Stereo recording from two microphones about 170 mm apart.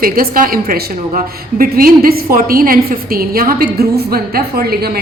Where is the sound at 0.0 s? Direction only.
55° right (ahead or behind).